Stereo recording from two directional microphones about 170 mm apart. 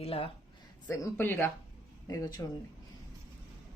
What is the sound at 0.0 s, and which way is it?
Speech, 35° left (ahead or behind).